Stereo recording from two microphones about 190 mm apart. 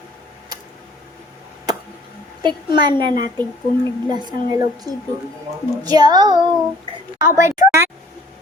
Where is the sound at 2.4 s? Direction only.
25° right (ahead or behind).